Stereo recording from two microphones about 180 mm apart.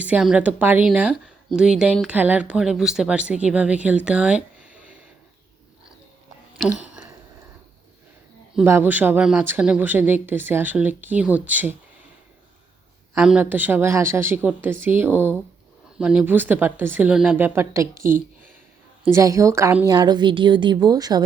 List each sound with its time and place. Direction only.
0.0 s speech: 5° right (ahead or behind)
8.5 s speech: 10° right (ahead or behind)
13.1 s speech: 5° right (ahead or behind)
17.9 s speech: 50° right (ahead or behind)
19.0 s a woman's voice: 15° right (ahead or behind)